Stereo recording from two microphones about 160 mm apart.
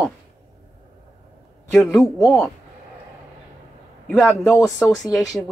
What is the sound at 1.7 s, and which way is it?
Speech, 15° left (ahead or behind).